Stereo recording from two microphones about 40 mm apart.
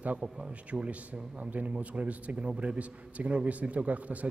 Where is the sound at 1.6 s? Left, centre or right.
Right.